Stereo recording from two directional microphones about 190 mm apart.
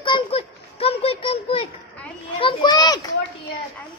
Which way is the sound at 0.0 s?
30° left (ahead or behind).